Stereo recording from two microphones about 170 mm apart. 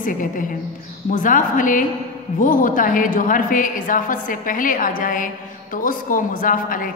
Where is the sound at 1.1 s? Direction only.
50° left (ahead or behind).